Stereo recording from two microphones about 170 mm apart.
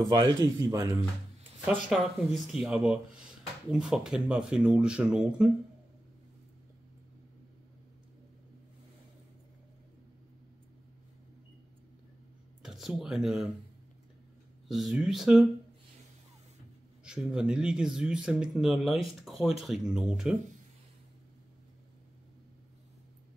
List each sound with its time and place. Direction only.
0.0 s a man's voice: 20° right (ahead or behind)
1.9 s speech: centre (ahead or behind)
12.6 s speech: centre (ahead or behind)
14.7 s speech: centre (ahead or behind)
17.0 s speech: 5° right (ahead or behind)